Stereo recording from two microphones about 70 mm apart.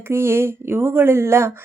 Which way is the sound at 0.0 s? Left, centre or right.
Right.